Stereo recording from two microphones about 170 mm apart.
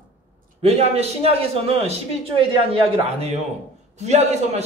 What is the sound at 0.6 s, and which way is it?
A man's voice, 35° right (ahead or behind).